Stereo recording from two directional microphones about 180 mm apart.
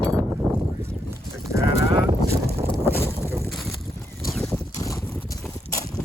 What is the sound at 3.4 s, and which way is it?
Boat, centre (ahead or behind).